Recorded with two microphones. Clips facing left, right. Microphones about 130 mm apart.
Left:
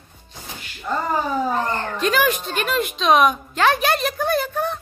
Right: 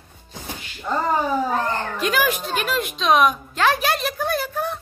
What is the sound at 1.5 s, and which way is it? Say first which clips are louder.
Speech: even; 5° right (ahead or behind).